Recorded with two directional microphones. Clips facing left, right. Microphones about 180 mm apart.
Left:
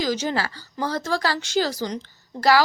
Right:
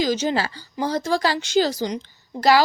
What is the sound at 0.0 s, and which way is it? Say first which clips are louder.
Speech: right 3 dB; 20° right (ahead or behind).